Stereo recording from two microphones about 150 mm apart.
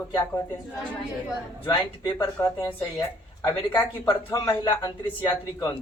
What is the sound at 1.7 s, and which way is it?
Speech, 25° left (ahead or behind).